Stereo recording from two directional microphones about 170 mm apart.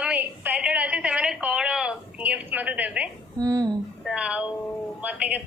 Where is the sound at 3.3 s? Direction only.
20° right (ahead or behind).